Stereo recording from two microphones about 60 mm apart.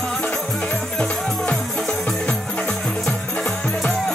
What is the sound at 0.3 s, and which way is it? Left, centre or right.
Music, centre.